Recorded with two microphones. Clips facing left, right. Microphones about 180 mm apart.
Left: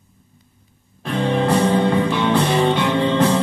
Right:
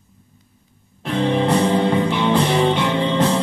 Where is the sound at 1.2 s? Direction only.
25° right (ahead or behind).